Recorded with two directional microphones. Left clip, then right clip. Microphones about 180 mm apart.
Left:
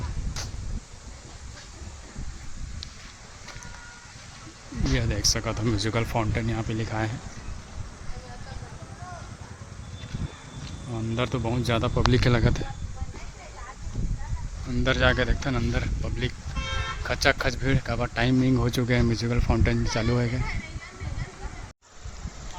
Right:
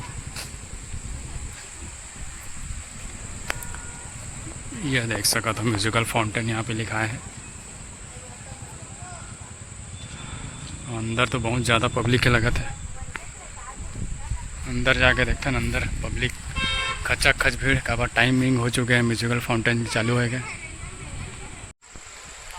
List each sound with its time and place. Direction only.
4.9 s speech: 5° left (ahead or behind)
10.9 s speech: centre (ahead or behind)
14.7 s speech: 15° left (ahead or behind)
16.6 s vehicle: 60° left (ahead or behind)
17.0 s speech: 10° left (ahead or behind)